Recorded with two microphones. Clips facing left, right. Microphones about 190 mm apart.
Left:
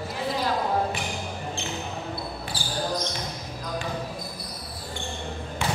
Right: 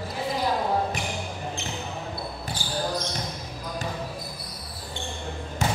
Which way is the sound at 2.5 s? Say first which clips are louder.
Left 1 dB; 30° left (ahead or behind).